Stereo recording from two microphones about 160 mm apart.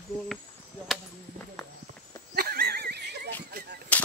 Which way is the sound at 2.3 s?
75° right (ahead or behind).